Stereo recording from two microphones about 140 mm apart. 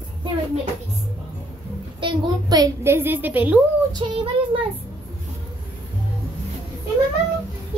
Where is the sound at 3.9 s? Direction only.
35° right (ahead or behind).